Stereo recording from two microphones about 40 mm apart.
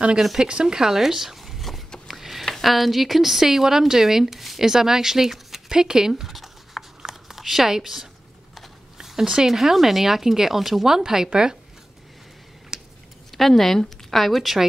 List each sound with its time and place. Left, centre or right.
0.4 s speech: right; by 1.8 s centre
2.0 s a sound: centre
2.4 s a woman's voice: centre
6.2 s a sound: centre
8.9 s zipper: centre
9.5 s a woman's voice: centre
11.4 s speech: centre
12.7 s a sound: centre
13.3 s a woman's voice: centre